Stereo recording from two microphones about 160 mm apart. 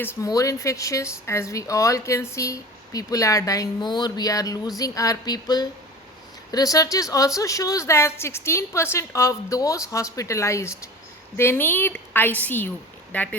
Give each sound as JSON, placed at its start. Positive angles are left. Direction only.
{"t": 0.2, "sound": "a woman's voice", "side_deg": 20}